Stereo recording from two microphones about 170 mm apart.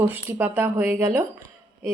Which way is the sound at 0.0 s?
10° right (ahead or behind).